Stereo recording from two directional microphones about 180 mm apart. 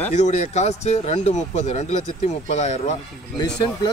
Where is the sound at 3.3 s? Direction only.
25° left (ahead or behind).